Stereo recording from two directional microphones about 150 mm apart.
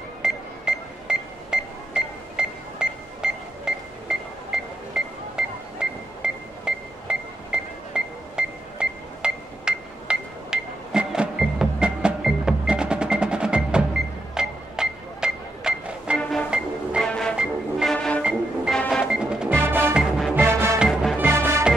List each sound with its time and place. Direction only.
0.2 s music: 5° right (ahead or behind)
16.2 s music: 5° left (ahead or behind)
16.4 s music: 5° right (ahead or behind)
17.1 s music: 5° left (ahead or behind)
17.4 s music: 5° right (ahead or behind)
17.9 s music: 5° left (ahead or behind)
20.3 s music: 15° right (ahead or behind)
20.9 s music: centre (ahead or behind)
21.2 s music: 15° right (ahead or behind)